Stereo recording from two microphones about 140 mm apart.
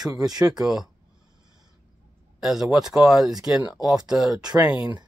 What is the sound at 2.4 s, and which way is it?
Speech, 5° right (ahead or behind).